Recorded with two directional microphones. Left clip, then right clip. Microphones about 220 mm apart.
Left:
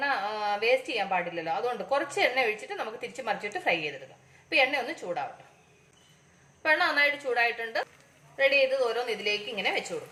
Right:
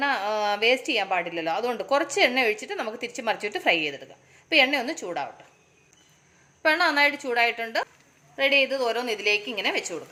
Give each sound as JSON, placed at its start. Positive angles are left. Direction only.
{"t": 0.0, "sound": "speech", "side_deg": -45}
{"t": 6.6, "sound": "speech", "side_deg": -50}